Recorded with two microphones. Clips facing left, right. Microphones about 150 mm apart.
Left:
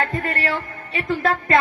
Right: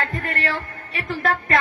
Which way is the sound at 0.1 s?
25° left (ahead or behind).